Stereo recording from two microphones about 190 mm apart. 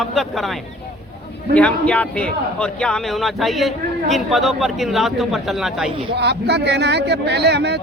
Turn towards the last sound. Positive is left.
turn(degrees=-60)  # may be behind; listen again after turning